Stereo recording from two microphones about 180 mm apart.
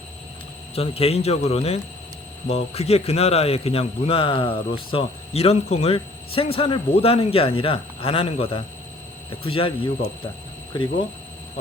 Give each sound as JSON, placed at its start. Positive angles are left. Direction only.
{"t": 0.8, "sound": "a man's voice", "side_deg": 35}